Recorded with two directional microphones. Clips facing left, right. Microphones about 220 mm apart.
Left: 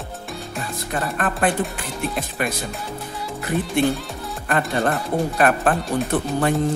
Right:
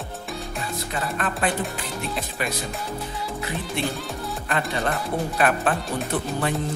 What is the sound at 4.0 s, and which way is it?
Music, centre (ahead or behind).